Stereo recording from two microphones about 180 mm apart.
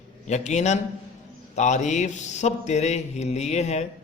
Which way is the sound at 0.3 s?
40° left (ahead or behind).